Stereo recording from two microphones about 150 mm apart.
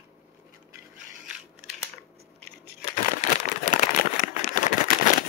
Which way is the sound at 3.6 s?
60° left (ahead or behind).